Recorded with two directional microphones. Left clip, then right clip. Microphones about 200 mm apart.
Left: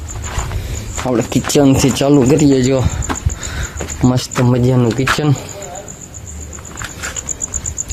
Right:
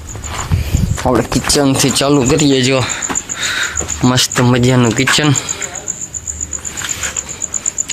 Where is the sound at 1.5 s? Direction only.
30° left (ahead or behind); by 2.9 s 10° left (ahead or behind).